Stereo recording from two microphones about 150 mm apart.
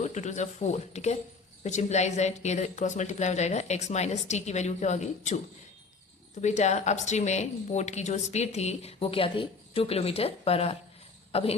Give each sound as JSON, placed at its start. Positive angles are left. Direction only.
{"t": 0.0, "sound": "a woman's voice", "side_deg": 50}
{"t": 6.4, "sound": "a woman's voice", "side_deg": 50}